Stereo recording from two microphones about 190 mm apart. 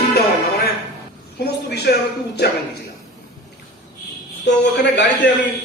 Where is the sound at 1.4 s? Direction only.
60° left (ahead or behind).